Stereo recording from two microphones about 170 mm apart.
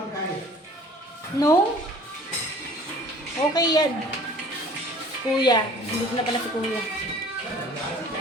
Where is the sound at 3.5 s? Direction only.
25° left (ahead or behind).